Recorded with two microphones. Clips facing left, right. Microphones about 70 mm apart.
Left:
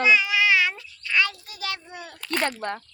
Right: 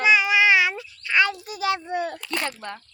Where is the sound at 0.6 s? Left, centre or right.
Centre.